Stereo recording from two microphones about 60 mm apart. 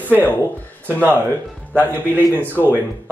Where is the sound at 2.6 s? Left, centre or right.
Right.